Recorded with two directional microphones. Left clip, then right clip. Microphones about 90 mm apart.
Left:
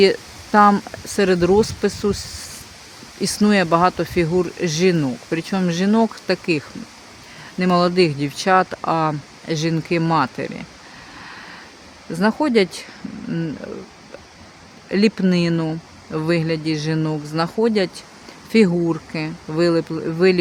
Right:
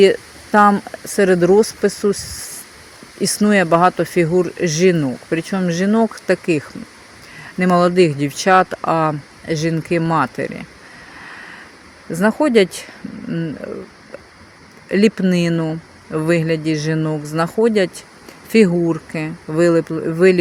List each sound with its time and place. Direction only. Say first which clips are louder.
0.0 s a sound: right 3 dB; 20° right (ahead or behind)
1.0 s speech: right 4 dB; 25° right (ahead or behind)
6.1 s speech: right 3 dB; 25° right (ahead or behind)
12.1 s speech: right 3 dB; 30° right (ahead or behind)
13.6 s speech: right 4 dB; 20° right (ahead or behind)
14.8 s speech: right 3 dB; 25° right (ahead or behind)
15.5 s speech: right 2 dB; 10° right (ahead or behind)
16.1 s speech: right 3 dB; 30° right (ahead or behind)